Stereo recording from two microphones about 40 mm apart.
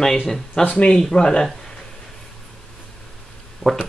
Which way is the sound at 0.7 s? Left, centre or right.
Left.